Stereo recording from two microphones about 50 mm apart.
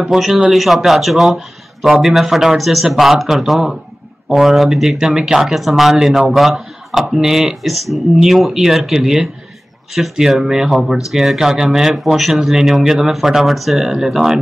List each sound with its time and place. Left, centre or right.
0.1 s speech: centre